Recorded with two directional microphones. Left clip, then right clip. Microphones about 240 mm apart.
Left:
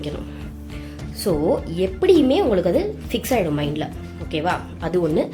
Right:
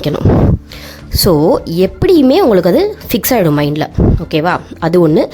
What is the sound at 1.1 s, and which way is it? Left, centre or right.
A woman's voice, right.